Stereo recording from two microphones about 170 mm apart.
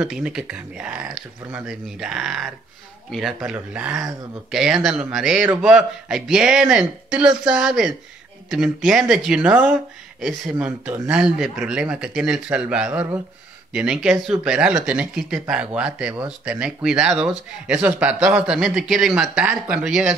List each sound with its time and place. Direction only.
0.0 s speech: 5° right (ahead or behind)